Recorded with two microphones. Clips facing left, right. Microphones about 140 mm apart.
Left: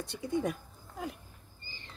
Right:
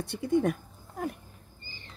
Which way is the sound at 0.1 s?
60° right (ahead or behind).